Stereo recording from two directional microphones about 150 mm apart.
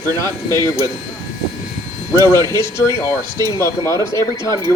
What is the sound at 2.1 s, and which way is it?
Speech, 20° left (ahead or behind).